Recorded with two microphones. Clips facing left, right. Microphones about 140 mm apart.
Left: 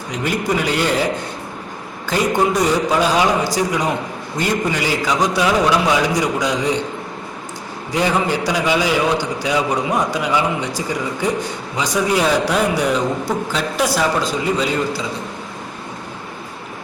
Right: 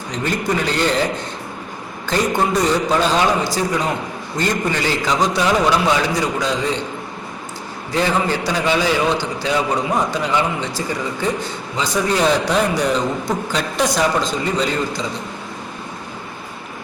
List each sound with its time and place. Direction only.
0.1 s a man's voice: 10° left (ahead or behind)
2.0 s a man's voice: 10° left (ahead or behind)
7.9 s a man's voice: 15° left (ahead or behind)